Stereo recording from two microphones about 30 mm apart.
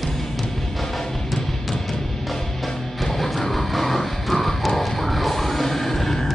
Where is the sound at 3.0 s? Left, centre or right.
Centre.